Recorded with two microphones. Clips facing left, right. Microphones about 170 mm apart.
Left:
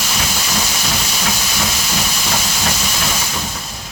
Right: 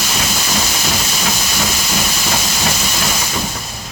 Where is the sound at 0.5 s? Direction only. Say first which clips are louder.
Right 2 dB; 10° right (ahead or behind).